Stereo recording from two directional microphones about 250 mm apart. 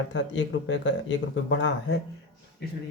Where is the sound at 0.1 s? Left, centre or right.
Left.